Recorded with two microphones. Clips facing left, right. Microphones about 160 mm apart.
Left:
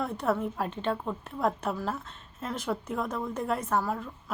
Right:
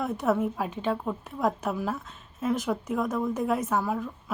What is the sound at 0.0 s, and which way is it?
A woman's voice, centre (ahead or behind).